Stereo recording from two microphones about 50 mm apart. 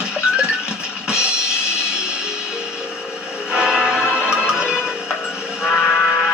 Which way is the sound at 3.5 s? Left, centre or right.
Centre.